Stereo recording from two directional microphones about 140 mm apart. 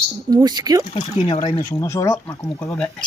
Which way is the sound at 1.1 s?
40° left (ahead or behind).